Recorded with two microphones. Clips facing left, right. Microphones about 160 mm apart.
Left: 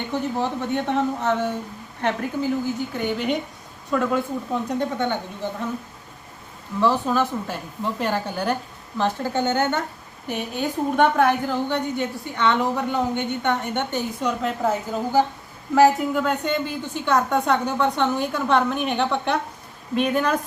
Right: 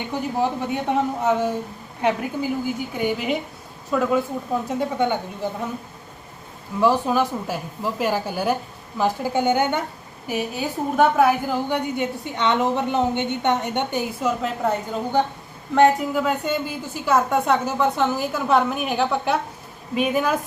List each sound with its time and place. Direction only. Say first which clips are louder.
0.1 s a woman's voice: right 2 dB; 10° right (ahead or behind)
6.7 s a woman's voice: right 2 dB; 10° right (ahead or behind)
14.2 s a woman's voice: even; centre (ahead or behind)